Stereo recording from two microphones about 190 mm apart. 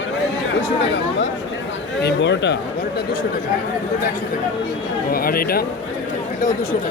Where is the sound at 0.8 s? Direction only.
70° left (ahead or behind).